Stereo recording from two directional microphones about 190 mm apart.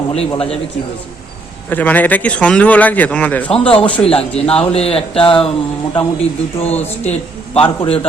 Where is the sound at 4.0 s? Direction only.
30° left (ahead or behind).